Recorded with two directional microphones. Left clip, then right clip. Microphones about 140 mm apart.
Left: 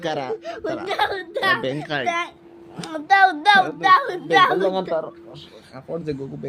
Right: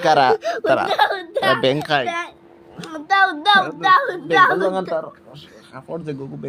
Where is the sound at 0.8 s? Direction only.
40° right (ahead or behind).